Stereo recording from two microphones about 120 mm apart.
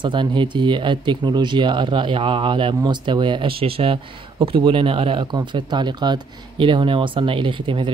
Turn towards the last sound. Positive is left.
turn(degrees=-45)  # may be behind; listen again after turning